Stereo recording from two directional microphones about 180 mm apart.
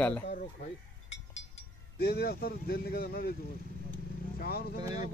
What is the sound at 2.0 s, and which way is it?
Speech, 60° left (ahead or behind).